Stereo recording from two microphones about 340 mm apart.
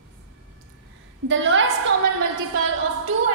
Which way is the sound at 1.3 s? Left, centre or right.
Right.